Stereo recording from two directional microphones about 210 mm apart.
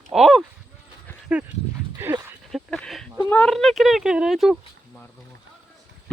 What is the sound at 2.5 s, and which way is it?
Speech, centre (ahead or behind).